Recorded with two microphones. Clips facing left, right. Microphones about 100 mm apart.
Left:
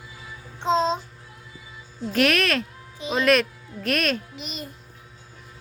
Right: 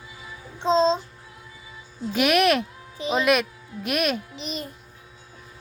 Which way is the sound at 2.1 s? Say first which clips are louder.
Right 2 dB; 10° right (ahead or behind).